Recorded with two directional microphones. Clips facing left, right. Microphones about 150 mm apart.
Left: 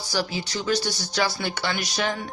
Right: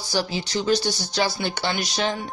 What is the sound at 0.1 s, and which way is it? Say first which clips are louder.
Speech: right 3 dB; 25° right (ahead or behind).